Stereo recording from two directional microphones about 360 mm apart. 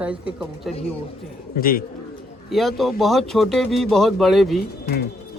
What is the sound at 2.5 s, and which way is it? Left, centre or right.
Speech, centre.